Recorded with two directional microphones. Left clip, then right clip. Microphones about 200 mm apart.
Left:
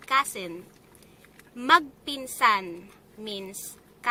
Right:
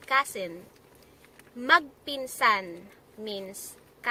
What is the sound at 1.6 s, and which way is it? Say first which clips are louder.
A woman's voice: left 2 dB; 15° left (ahead or behind).